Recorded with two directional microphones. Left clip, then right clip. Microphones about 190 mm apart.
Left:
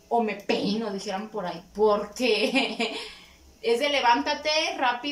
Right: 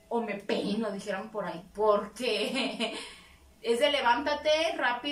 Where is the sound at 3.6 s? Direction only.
5° left (ahead or behind).